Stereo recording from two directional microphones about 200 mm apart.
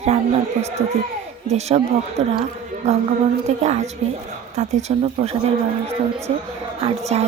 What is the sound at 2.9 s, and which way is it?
A woman's voice, 35° right (ahead or behind).